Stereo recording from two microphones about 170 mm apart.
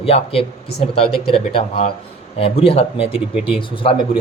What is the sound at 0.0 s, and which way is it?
Speech, 35° left (ahead or behind).